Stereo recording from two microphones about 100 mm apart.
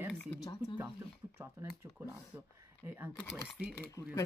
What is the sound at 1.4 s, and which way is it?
Speech, 25° right (ahead or behind).